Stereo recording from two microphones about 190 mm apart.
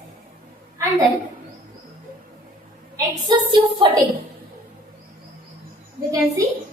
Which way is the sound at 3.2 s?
25° right (ahead or behind).